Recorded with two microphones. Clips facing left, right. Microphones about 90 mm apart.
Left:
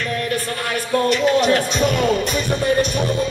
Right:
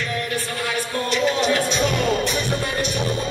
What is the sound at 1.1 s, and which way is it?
Music, 50° left (ahead or behind).